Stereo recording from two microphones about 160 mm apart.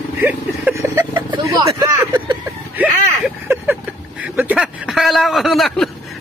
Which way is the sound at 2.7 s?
10° right (ahead or behind).